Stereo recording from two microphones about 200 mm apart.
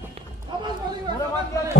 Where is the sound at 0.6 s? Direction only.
20° right (ahead or behind).